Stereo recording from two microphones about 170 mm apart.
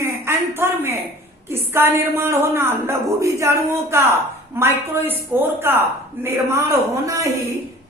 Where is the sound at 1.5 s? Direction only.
15° right (ahead or behind).